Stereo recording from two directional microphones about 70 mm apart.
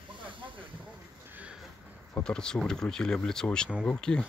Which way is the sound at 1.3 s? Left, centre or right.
Right.